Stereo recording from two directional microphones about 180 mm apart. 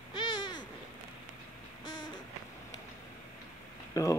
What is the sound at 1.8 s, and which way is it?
Owl, 25° left (ahead or behind).